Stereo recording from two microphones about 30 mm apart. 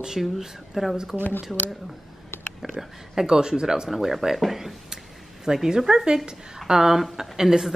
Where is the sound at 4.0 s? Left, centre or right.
Centre.